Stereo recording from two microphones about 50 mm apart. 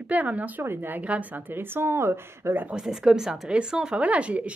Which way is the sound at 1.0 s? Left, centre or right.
Right.